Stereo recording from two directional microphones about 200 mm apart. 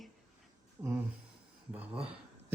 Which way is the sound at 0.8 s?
10° right (ahead or behind).